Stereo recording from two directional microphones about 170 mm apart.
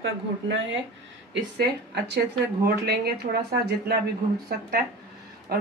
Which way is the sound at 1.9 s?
80° right.